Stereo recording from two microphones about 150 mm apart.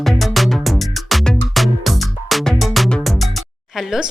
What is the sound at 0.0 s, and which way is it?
Music, centre (ahead or behind).